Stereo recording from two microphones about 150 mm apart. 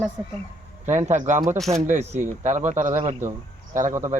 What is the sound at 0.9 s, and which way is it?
Speech, 50° right (ahead or behind).